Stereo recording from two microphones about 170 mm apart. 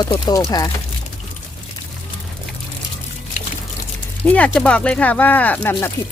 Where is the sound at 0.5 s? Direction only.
25° left (ahead or behind).